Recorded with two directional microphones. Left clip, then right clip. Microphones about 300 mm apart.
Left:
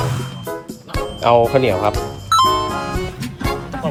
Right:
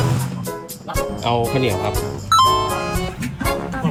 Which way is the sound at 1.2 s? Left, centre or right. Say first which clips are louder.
Left 9 dB; left.